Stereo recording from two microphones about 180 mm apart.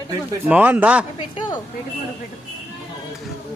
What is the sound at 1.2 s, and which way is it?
Speech, 25° left (ahead or behind).